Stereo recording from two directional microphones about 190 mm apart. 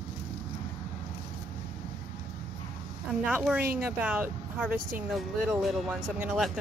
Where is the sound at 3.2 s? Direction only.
5° right (ahead or behind).